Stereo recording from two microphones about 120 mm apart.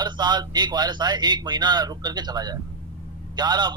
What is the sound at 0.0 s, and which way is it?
A man's voice, 35° right (ahead or behind).